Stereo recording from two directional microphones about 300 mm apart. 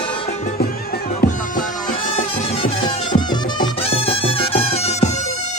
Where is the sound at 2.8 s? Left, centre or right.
Centre.